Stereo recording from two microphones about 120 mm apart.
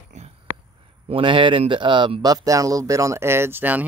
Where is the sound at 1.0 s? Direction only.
45° right (ahead or behind).